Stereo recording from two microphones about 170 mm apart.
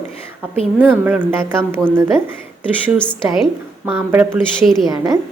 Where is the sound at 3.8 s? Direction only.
10° right (ahead or behind).